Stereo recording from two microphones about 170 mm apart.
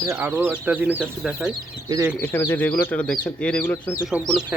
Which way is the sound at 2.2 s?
10° left (ahead or behind).